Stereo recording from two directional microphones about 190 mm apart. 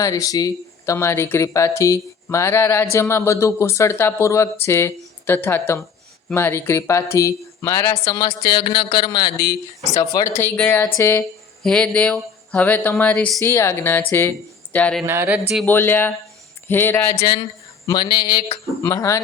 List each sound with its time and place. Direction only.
0.0 s speech: 20° left (ahead or behind)
15.0 s speech: 10° right (ahead or behind)
15.6 s speech: 10° left (ahead or behind)
17.8 s speech: 20° left (ahead or behind)